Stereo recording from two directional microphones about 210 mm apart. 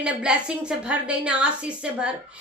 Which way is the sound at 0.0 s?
5° right (ahead or behind).